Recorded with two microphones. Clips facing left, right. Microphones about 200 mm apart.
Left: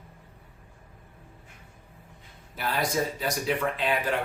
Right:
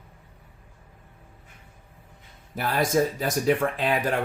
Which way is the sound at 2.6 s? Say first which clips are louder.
Right 5 dB; 45° right (ahead or behind).